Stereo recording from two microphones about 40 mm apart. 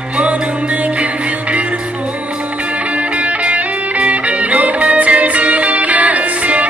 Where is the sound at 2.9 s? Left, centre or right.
Right.